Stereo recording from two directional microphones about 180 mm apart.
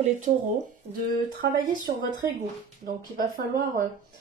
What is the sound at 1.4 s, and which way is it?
Speech, 70° right (ahead or behind).